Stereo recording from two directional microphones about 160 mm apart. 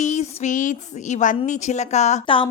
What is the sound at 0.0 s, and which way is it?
A woman's voice, 50° left (ahead or behind).